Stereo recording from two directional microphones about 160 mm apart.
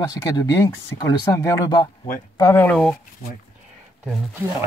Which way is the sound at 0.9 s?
20° left (ahead or behind).